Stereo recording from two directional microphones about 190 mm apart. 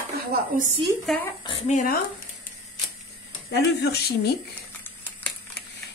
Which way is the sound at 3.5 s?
60° left (ahead or behind).